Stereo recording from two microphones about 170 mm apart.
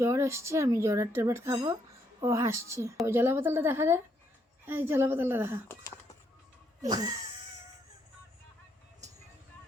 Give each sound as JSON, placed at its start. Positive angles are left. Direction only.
{"t": 0.0, "sound": "speech", "side_deg": -15}
{"t": 6.8, "sound": "speech", "side_deg": -25}